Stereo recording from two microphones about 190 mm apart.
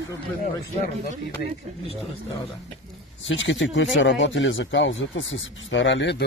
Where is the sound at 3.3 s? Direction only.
80° left.